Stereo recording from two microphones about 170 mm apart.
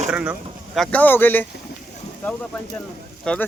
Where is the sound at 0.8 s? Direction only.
10° left (ahead or behind).